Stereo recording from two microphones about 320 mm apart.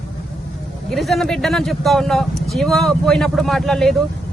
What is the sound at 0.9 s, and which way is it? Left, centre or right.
Speech, centre.